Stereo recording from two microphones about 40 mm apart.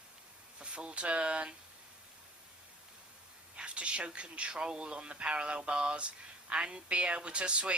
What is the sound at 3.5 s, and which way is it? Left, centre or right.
Speech, right.